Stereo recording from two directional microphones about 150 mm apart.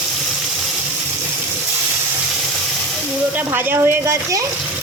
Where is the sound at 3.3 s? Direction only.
10° right (ahead or behind).